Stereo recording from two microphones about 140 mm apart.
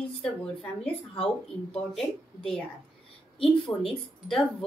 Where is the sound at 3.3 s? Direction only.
40° left (ahead or behind).